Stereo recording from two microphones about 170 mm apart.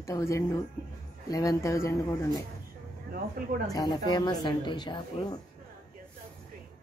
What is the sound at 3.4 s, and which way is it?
Speech, 55° right (ahead or behind).